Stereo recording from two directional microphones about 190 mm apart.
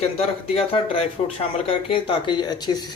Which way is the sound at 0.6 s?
30° left (ahead or behind).